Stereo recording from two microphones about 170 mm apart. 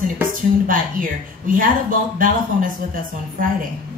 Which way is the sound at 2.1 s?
55° right (ahead or behind).